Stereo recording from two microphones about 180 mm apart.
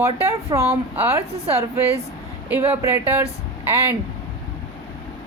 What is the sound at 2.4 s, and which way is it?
Speech, 15° right (ahead or behind).